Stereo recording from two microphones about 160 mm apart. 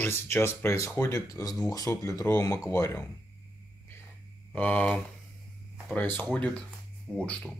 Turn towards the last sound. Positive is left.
turn(degrees=0)  # may be behind; listen again after turning